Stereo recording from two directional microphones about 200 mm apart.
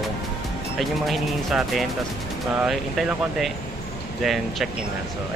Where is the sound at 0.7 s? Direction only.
Centre (ahead or behind).